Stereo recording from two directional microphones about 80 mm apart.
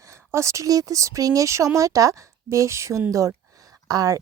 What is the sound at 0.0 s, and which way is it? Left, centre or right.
Speech, right.